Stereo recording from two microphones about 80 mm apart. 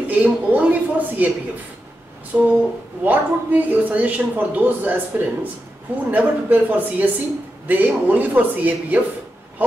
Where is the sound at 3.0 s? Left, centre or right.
Centre.